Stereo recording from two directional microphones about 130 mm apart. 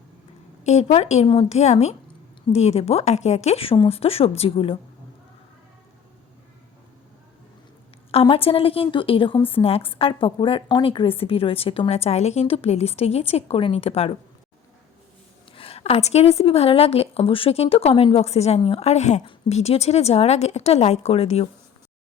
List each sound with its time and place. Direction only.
0.6 s a woman's voice: 60° left (ahead or behind); by 4.8 s 45° left (ahead or behind)
8.1 s speech: 45° left (ahead or behind)
15.5 s a woman's voice: 50° left (ahead or behind)